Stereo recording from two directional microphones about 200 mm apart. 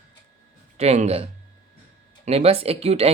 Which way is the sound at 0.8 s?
30° right (ahead or behind).